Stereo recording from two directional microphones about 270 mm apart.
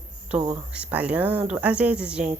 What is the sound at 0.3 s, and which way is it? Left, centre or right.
Speech, centre.